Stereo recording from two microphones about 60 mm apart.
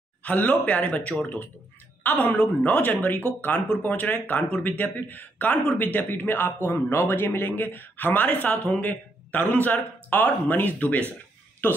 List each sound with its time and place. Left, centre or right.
0.2 s a woman's voice: left